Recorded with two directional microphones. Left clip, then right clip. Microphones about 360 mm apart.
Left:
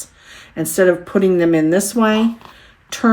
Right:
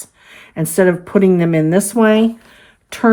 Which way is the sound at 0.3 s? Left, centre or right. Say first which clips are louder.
Even; centre.